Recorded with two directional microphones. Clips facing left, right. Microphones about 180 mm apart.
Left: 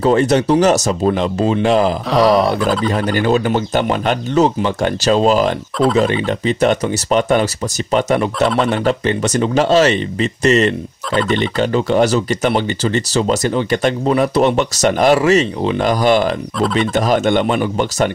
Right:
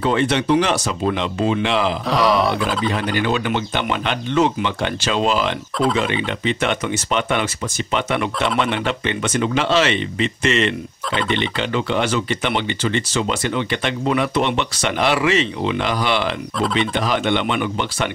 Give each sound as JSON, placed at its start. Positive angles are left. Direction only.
{"t": 0.0, "sound": "speech", "side_deg": 40}
{"t": 2.0, "sound": "a sound", "side_deg": 0}
{"t": 2.9, "sound": "speech", "side_deg": 40}